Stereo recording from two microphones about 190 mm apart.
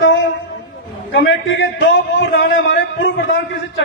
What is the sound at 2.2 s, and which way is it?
A man's voice, 65° left (ahead or behind).